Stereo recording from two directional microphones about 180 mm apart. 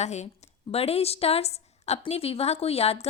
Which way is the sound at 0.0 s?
40° left (ahead or behind).